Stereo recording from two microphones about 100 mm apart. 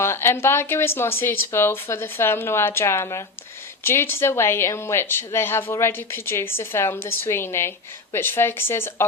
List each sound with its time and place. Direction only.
0.0 s speech: 25° left (ahead or behind)